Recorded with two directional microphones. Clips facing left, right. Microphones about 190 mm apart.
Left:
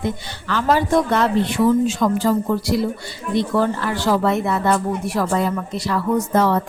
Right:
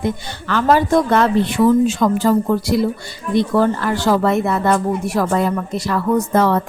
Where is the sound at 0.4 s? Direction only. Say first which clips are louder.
Right 3 dB; 55° right (ahead or behind).